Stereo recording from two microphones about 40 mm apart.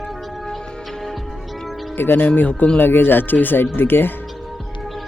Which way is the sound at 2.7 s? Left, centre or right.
Left.